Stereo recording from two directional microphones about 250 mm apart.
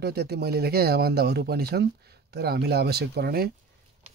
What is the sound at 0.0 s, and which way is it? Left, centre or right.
Speech, right.